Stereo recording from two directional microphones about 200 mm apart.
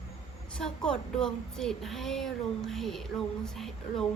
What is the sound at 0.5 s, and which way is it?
Speech, 5° left (ahead or behind).